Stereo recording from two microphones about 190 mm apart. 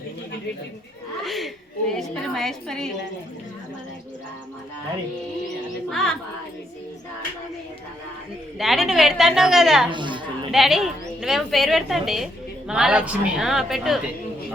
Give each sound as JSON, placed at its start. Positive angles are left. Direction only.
{"t": 1.2, "sound": "a sound", "side_deg": 0}
{"t": 1.9, "sound": "a woman's voice", "side_deg": 0}
{"t": 5.9, "sound": "a woman's voice", "side_deg": 0}
{"t": 8.5, "sound": "a woman's voice", "side_deg": 0}
{"t": 9.9, "sound": "speech", "side_deg": -25}
{"t": 10.5, "sound": "a woman's voice", "side_deg": 0}